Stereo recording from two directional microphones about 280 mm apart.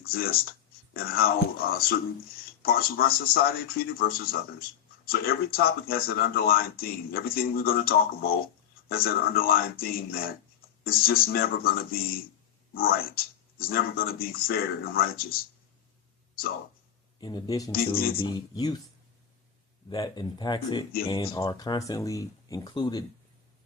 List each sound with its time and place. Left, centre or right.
0.0 s speech: left
17.2 s speech: centre
17.7 s speech: left
18.2 s speech: centre
19.9 s speech: centre